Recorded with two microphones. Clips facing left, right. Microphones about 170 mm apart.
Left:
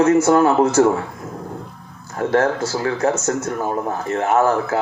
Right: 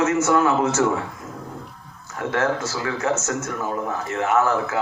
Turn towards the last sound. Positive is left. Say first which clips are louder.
# left 3 dB
turn(degrees=35)  # may be behind; listen again after turning